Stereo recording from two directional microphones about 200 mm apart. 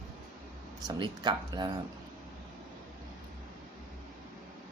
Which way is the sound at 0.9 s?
20° right (ahead or behind).